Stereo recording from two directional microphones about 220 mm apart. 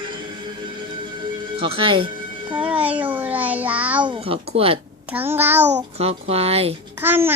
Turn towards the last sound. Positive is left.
turn(degrees=-10)  # may be behind; listen again after turning